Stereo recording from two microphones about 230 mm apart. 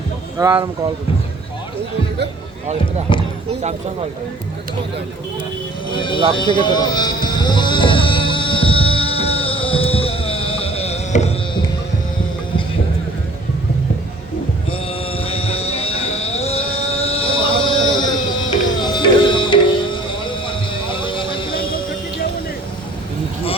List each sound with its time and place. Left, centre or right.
0.3 s speech: centre
3.1 s speech: left
5.9 s speech: left
6.3 s a sound: centre
14.7 s a sound: left
18.8 s music: centre